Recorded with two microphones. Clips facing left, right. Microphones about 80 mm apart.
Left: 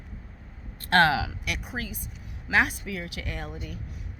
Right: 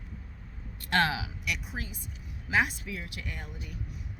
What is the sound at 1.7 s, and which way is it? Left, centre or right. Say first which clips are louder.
Speech: left 5 dB; left.